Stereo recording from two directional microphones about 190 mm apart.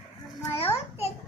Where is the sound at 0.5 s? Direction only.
30° left (ahead or behind).